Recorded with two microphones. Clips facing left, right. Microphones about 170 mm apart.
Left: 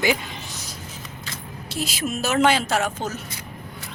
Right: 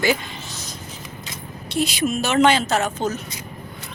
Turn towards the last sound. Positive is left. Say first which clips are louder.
# right 2 dB
turn(degrees=10)  # may be behind; listen again after turning